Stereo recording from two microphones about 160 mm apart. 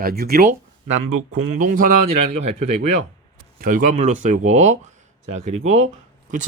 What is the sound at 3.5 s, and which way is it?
Speech, 60° right (ahead or behind).